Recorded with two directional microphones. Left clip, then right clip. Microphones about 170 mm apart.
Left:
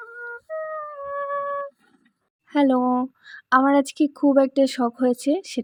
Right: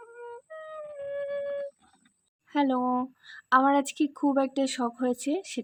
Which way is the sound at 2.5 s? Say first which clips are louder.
Left 6 dB; 25° left (ahead or behind).